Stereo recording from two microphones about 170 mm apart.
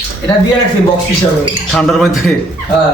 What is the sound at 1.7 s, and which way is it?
Speech, centre (ahead or behind).